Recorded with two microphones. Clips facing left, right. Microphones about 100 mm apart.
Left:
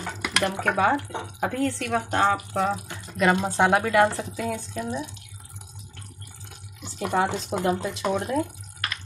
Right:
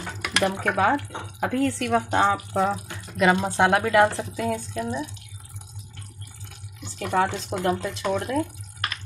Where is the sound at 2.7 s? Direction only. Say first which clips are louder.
Right 1 dB; 5° right (ahead or behind).